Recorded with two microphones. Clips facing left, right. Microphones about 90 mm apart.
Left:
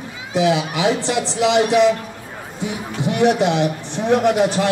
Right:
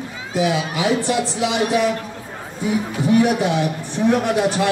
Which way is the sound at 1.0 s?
90° left.